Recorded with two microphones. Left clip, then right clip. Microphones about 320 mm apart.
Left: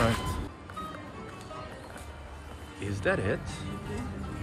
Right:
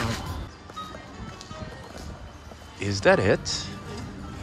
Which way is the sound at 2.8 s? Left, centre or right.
Centre.